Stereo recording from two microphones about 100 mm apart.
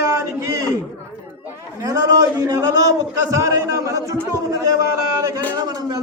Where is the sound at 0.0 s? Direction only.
30° right (ahead or behind).